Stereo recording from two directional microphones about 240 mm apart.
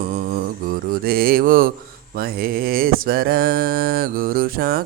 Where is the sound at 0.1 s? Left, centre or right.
Right.